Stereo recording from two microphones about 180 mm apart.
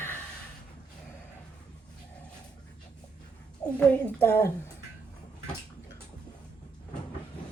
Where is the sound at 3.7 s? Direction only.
10° left (ahead or behind).